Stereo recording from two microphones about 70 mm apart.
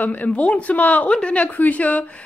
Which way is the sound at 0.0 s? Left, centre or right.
Left.